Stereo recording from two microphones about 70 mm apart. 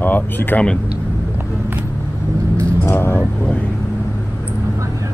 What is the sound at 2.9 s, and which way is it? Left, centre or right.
Vehicle, left.